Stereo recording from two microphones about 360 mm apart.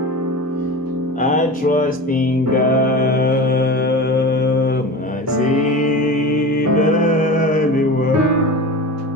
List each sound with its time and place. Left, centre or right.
1.2 s music: left
6.7 s music: left